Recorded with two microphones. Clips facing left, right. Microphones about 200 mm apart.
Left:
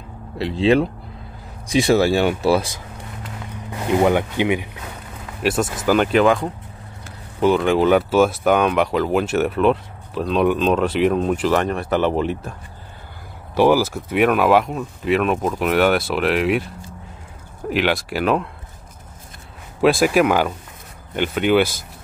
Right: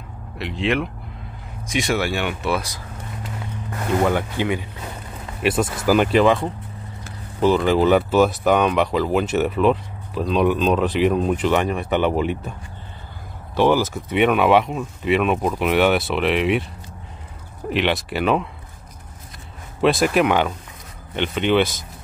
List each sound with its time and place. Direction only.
0.4 s speech: 30° left (ahead or behind)
3.7 s speech: 15° left (ahead or behind)
5.4 s speech: 5° right (ahead or behind)
13.6 s speech: 10° left (ahead or behind)
17.6 s speech: 5° left (ahead or behind)
19.8 s speech: 5° left (ahead or behind)